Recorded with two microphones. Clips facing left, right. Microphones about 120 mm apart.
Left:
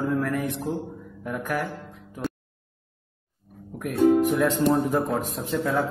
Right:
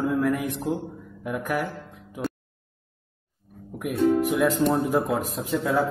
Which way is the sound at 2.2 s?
Centre (ahead or behind).